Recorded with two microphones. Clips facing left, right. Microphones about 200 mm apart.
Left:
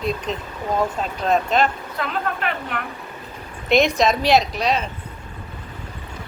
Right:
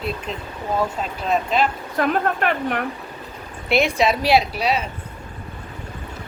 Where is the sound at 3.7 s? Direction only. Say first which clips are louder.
Left 2 dB; 10° right (ahead or behind).